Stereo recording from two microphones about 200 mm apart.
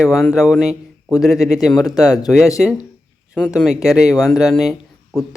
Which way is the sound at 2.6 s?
Centre (ahead or behind).